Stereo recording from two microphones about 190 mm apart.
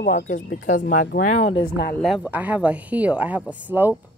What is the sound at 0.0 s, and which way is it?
Speech, 65° left (ahead or behind).